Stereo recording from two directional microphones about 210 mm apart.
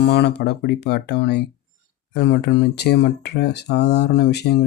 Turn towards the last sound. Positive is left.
turn(degrees=50)  # may be behind; listen again after turning